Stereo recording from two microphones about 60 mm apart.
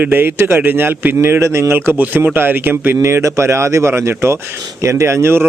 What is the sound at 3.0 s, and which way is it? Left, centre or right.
A man's voice, right.